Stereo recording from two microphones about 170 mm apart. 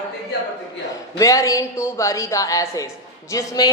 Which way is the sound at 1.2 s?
20° left (ahead or behind).